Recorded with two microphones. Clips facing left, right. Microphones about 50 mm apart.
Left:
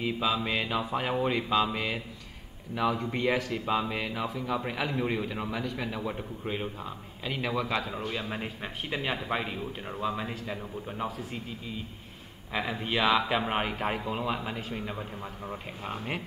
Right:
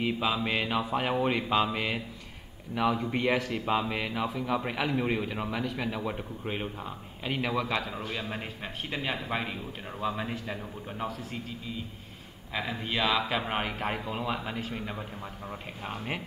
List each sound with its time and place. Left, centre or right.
0.0 s mantra: centre
2.7 s a man's voice: centre
6.5 s mantra: centre
7.5 s a man's voice: centre
9.0 s a man's voice: centre
12.5 s a man's voice: centre